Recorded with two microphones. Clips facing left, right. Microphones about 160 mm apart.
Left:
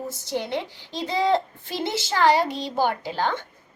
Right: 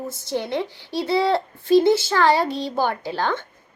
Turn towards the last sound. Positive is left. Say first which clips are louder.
# right 2 dB
turn(degrees=15)  # may be behind; listen again after turning